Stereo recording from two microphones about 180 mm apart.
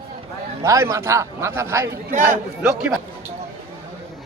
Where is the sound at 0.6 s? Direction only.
15° right (ahead or behind).